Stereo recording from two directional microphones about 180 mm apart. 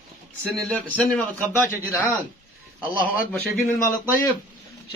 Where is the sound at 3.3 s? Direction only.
10° left (ahead or behind).